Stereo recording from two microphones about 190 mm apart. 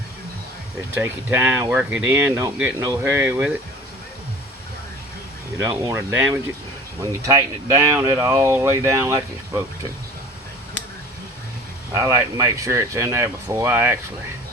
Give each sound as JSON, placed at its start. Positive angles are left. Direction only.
{"t": 0.9, "sound": "speech", "side_deg": -10}
{"t": 5.5, "sound": "speech", "side_deg": -15}
{"t": 11.9, "sound": "speech", "side_deg": -15}